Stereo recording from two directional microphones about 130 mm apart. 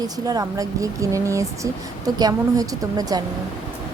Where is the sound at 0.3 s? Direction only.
30° right (ahead or behind).